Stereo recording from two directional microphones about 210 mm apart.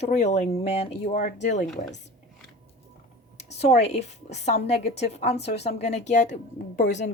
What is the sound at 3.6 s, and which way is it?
A woman's voice, 30° left (ahead or behind).